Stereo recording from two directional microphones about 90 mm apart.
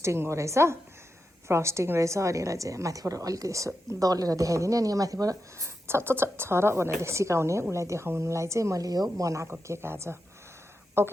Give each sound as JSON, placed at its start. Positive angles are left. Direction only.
{"t": 0.0, "sound": "a woman's voice", "side_deg": -30}
{"t": 5.9, "sound": "a woman's voice", "side_deg": -25}